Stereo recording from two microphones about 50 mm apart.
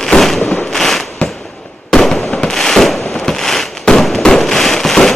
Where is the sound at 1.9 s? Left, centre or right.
Centre.